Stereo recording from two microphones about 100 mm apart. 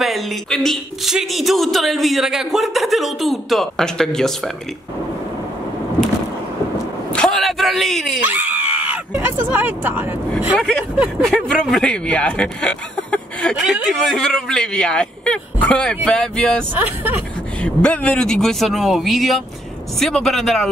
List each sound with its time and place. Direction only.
0.0 s speech: centre (ahead or behind)
7.1 s a sound: 5° left (ahead or behind)
8.2 s screaming: 15° right (ahead or behind)
9.1 s speech: 20° right (ahead or behind)
10.5 s speech: 5° left (ahead or behind)
13.6 s speech: centre (ahead or behind)
16.7 s speech: 15° right (ahead or behind)
17.6 s speech: 10° left (ahead or behind)